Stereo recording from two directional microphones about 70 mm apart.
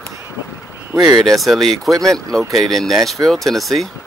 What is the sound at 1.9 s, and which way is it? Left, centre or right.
Speech, right.